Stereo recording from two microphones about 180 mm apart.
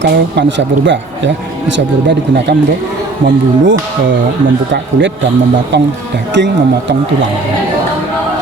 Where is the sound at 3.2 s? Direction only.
90° right.